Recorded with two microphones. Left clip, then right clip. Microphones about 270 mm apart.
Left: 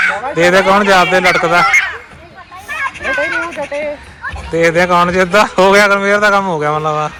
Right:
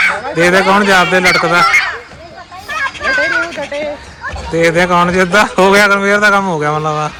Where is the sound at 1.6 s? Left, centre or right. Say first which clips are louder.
Right 1 dB; right.